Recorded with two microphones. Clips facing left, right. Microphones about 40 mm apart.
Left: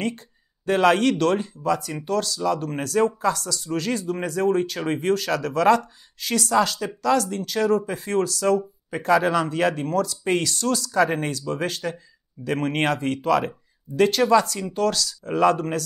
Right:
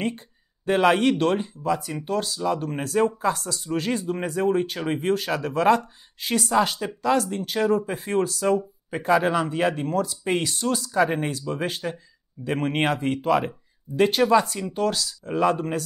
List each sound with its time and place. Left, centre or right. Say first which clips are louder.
0.7 s speech: left 1 dB; centre